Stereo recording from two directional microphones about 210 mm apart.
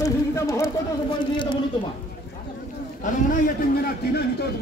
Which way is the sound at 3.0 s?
40° left (ahead or behind).